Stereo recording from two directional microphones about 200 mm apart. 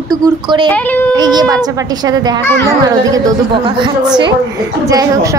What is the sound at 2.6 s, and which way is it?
A woman's voice, 15° right (ahead or behind).